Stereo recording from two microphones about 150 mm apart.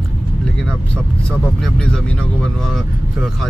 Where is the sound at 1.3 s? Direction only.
5° left (ahead or behind).